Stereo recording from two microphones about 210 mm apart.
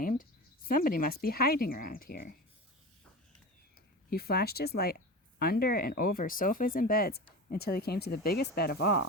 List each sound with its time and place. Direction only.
0.0 s cricket: 40° left (ahead or behind)
0.7 s speech: 40° left (ahead or behind)
4.1 s speech: 45° left (ahead or behind)